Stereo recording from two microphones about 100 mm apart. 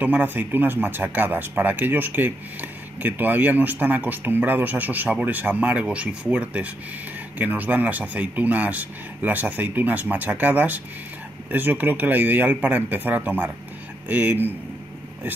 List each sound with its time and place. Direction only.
0.0 s speech: 15° right (ahead or behind)